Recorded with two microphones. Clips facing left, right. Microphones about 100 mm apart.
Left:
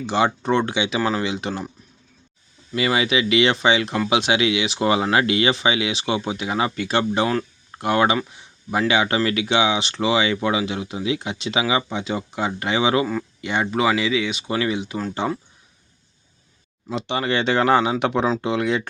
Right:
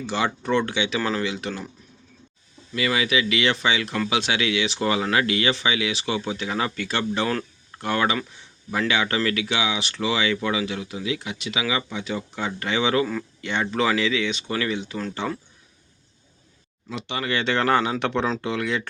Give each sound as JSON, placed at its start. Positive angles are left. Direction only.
{"t": 0.0, "sound": "speech", "side_deg": 20}
{"t": 2.7, "sound": "speech", "side_deg": 25}
{"t": 16.9, "sound": "speech", "side_deg": 25}